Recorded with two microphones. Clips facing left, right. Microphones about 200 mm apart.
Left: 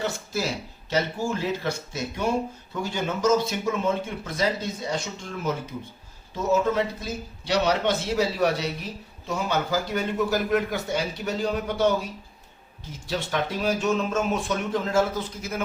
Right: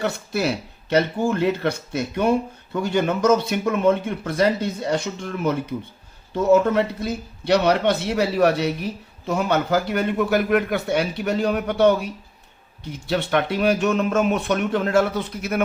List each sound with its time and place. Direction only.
0.0 s speech: 65° right (ahead or behind)